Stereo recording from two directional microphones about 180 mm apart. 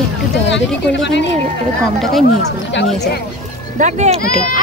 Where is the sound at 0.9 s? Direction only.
75° left (ahead or behind).